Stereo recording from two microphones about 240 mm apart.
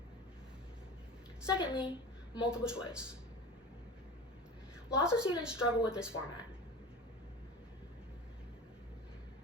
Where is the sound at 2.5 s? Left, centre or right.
Centre.